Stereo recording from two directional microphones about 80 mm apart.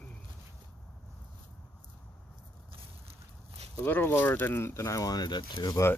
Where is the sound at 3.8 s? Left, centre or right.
Left.